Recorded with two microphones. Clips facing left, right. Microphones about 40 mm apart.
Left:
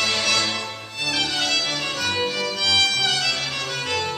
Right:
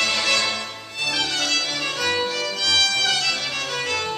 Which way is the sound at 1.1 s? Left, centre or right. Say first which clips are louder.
Left 1 dB; centre.